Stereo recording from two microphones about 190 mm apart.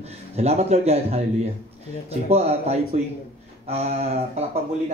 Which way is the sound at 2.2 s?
35° right (ahead or behind).